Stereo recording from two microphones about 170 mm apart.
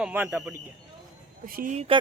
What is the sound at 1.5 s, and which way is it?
Speech, 60° right (ahead or behind).